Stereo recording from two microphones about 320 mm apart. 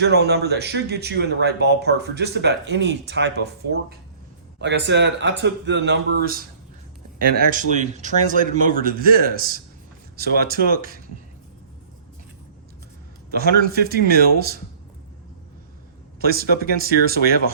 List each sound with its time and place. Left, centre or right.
0.0 s speech: right
13.3 s speech: right
16.2 s speech: right